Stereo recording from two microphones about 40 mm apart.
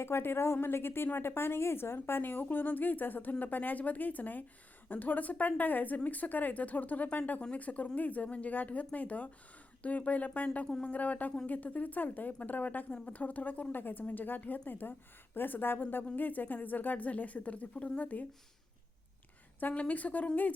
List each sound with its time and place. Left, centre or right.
0.0 s a woman's voice: left
2.2 s a woman's voice: left
19.7 s speech: left